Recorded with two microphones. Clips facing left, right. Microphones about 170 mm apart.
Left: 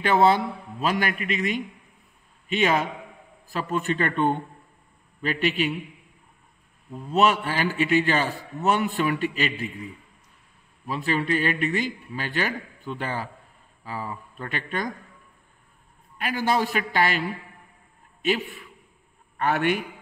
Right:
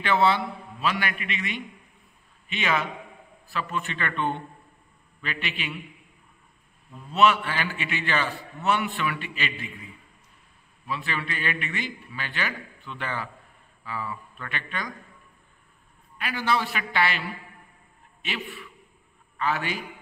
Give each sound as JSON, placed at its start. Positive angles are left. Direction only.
{"t": 0.0, "sound": "a man's voice", "side_deg": 45}
{"t": 6.9, "sound": "a man's voice", "side_deg": 40}
{"t": 10.9, "sound": "a man's voice", "side_deg": 40}
{"t": 16.2, "sound": "a man's voice", "side_deg": 45}
{"t": 19.3, "sound": "a man's voice", "side_deg": 55}